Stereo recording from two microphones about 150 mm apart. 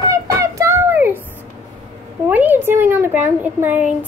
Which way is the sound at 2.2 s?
10° right (ahead or behind).